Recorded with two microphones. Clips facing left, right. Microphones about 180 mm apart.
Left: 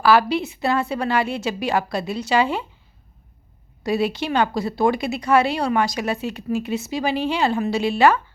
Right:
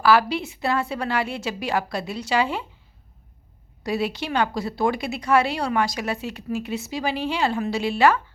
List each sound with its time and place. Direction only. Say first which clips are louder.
0.0 s a woman's voice: left 2 dB; 25° left (ahead or behind)
3.8 s a woman's voice: left 4 dB; 25° left (ahead or behind)